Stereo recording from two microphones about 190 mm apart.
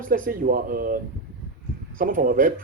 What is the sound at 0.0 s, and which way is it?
A man's voice, 45° right (ahead or behind).